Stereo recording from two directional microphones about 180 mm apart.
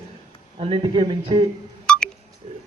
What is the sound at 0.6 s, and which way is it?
Speech, 30° right (ahead or behind).